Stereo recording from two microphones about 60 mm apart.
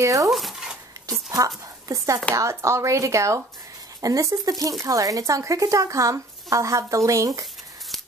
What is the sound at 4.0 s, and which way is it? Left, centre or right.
A woman's voice, right.